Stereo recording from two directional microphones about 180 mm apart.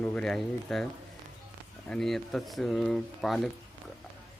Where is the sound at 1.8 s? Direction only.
5° left (ahead or behind).